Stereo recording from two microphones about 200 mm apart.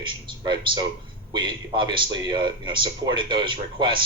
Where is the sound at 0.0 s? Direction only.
25° right (ahead or behind).